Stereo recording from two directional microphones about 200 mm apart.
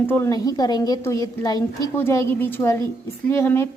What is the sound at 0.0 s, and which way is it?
A woman's voice, 10° left (ahead or behind).